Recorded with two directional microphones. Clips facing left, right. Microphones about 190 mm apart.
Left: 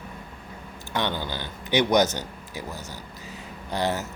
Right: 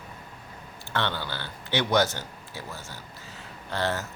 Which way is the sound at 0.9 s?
15° left (ahead or behind).